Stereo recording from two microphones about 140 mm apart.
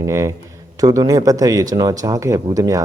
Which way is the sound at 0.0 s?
20° right (ahead or behind).